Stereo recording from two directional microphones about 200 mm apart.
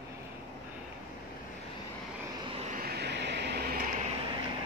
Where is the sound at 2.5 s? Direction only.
30° right (ahead or behind).